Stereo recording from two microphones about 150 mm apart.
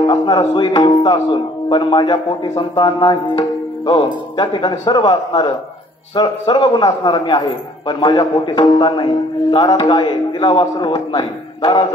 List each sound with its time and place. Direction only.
0.7 s a man's voice: 30° left (ahead or behind)
2.7 s music: 30° left (ahead or behind)
4.6 s a man's voice: 30° left (ahead or behind)